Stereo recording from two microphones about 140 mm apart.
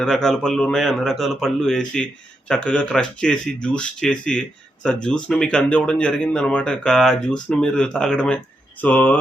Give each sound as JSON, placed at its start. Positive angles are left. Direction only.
{"t": 0.0, "sound": "a man's voice", "side_deg": 5}